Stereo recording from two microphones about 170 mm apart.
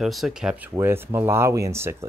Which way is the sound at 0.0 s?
Centre (ahead or behind).